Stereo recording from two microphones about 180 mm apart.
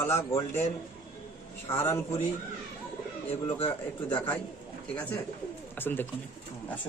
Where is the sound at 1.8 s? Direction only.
15° left (ahead or behind).